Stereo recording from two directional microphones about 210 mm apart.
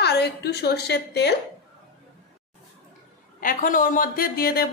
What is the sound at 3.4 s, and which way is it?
A woman's voice, 40° left (ahead or behind).